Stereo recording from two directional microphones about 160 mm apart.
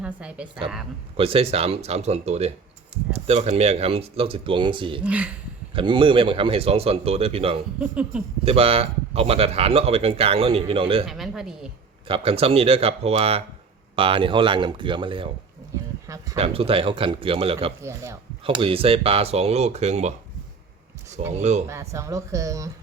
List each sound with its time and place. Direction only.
0.0 s a woman's voice: 5° right (ahead or behind)
1.1 s speech: 35° right (ahead or behind)
5.0 s a woman's voice: 10° right (ahead or behind)
5.7 s speech: 30° right (ahead or behind)
7.8 s a woman's voice: 10° right (ahead or behind)
8.4 s speech: 40° right (ahead or behind)
11.0 s speech: centre (ahead or behind)
12.0 s speech: 35° right (ahead or behind)
16.0 s speech: 20° right (ahead or behind)
16.4 s speech: 35° right (ahead or behind)
17.8 s a woman's voice: 20° right (ahead or behind)
18.4 s speech: 35° right (ahead or behind)
21.2 s speech: 45° right (ahead or behind)
21.7 s speech: 20° right (ahead or behind)